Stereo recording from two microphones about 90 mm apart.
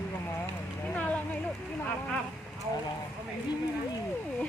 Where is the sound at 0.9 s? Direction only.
15° left (ahead or behind).